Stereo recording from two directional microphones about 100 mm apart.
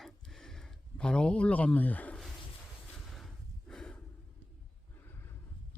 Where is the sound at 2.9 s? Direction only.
5° left (ahead or behind).